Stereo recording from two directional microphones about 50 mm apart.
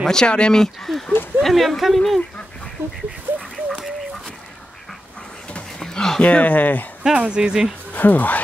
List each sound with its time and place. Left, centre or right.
0.0 s speech: centre
0.8 s speech: centre
3.3 s a sound: right
3.6 s dog: centre
5.8 s a sound: centre
6.2 s speech: left
7.0 s speech: centre
7.9 s speech: left